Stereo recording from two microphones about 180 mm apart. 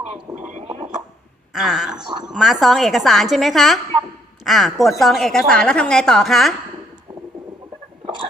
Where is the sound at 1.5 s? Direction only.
5° right (ahead or behind).